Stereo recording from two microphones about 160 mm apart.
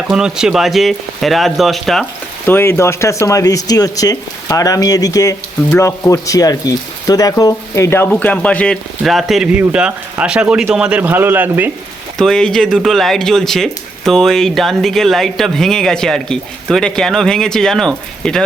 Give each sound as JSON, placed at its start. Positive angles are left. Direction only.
{"t": 0.1, "sound": "speech", "side_deg": -5}
{"t": 2.5, "sound": "speech", "side_deg": 15}
{"t": 12.1, "sound": "speech", "side_deg": 5}